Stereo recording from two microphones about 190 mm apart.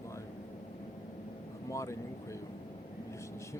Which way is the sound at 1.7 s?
15° left (ahead or behind).